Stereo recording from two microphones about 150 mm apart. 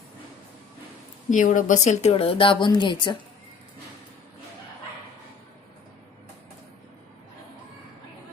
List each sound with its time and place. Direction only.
1.3 s speech: 60° left (ahead or behind); by 3.2 s 30° left (ahead or behind)